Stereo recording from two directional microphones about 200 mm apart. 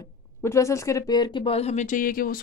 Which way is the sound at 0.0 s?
15° left (ahead or behind).